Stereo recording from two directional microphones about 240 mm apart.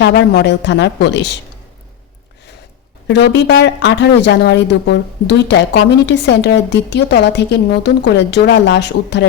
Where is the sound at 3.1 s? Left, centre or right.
Left.